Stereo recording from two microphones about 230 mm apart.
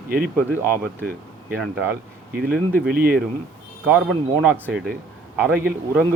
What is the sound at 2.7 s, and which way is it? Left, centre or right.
Speech, right.